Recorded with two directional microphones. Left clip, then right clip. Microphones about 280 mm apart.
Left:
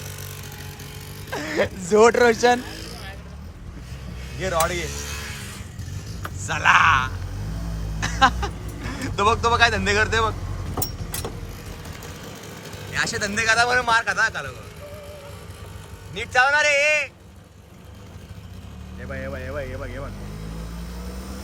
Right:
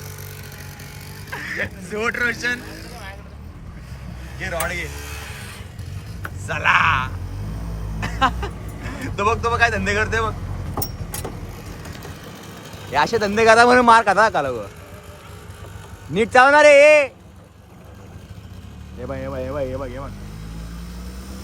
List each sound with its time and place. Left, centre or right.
1.3 s speech: centre
6.4 s speech: centre
8.0 s vehicle: centre
11.5 s vehicle: centre
12.9 s a man's voice: centre
16.2 s speech: right
19.1 s vehicle: centre